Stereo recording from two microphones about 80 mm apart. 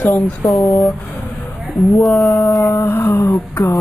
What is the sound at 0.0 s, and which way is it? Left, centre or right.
Speech, left.